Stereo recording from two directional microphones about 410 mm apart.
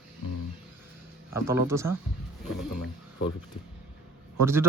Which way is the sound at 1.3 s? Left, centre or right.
Centre.